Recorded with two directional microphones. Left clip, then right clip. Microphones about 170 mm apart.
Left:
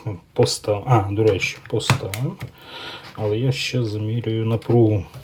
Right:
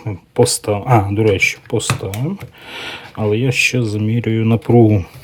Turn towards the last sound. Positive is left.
turn(degrees=-50)  # may be behind; listen again after turning